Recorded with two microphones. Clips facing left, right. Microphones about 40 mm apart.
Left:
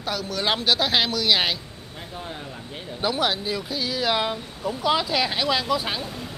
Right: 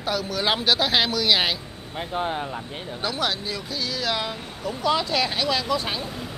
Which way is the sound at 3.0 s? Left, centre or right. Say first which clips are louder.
Left 3 dB; centre.